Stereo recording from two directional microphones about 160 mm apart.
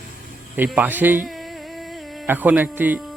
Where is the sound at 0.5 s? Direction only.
10° right (ahead or behind).